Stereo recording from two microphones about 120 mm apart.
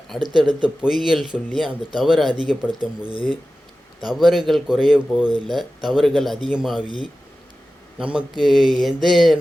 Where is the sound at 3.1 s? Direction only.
45° left (ahead or behind).